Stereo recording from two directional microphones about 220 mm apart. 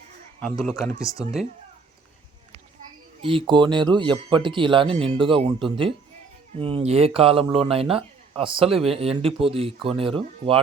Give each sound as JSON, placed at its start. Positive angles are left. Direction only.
{"t": 0.3, "sound": "speech", "side_deg": 5}
{"t": 3.2, "sound": "speech", "side_deg": -25}